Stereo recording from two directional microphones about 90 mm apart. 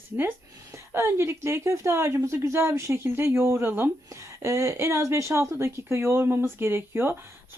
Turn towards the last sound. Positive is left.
turn(degrees=-25)  # may be behind; listen again after turning